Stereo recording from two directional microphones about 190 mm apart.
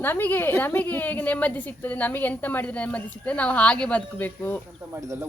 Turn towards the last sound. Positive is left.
turn(degrees=-10)  # may be behind; listen again after turning